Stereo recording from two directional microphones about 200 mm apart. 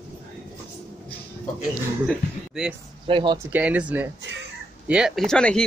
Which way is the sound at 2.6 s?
5° right (ahead or behind).